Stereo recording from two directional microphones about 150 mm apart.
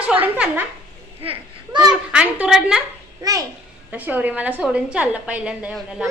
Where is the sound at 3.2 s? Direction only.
25° right (ahead or behind).